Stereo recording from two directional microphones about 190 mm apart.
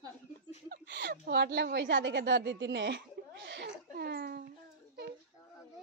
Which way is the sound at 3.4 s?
65° right (ahead or behind).